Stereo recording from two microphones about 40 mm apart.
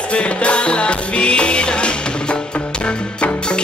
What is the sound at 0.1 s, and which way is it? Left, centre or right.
Music, left.